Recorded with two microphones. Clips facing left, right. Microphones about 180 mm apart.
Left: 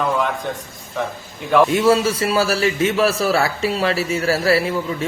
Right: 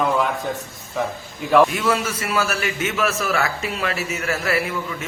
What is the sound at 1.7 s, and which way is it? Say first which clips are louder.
A man's voice: left 7 dB; 30° left (ahead or behind).